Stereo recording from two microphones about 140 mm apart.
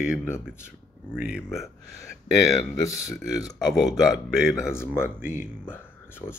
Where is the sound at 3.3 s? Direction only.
25° left (ahead or behind).